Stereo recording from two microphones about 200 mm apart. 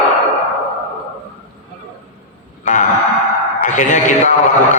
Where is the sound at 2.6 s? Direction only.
40° left (ahead or behind).